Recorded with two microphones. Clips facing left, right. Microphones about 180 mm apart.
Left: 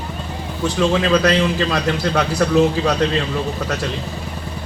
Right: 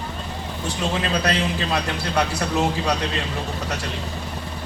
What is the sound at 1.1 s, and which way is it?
A man's voice, 70° left (ahead or behind).